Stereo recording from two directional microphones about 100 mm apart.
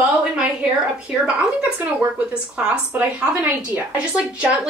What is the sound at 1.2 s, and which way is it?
A woman's voice, 10° right (ahead or behind).